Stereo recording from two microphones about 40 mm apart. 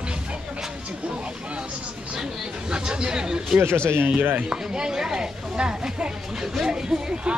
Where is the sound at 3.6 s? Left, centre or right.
Right.